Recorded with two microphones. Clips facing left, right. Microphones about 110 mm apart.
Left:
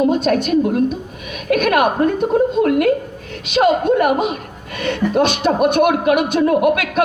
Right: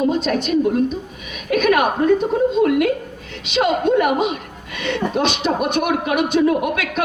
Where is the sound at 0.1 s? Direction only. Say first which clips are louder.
Left 3 dB; 45° left (ahead or behind).